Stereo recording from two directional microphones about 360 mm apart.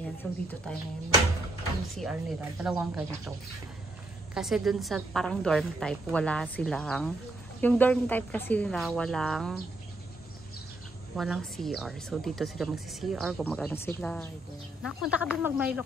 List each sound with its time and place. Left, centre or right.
0.2 s a woman's voice: centre
2.0 s a woman's voice: centre
11.1 s a woman's voice: centre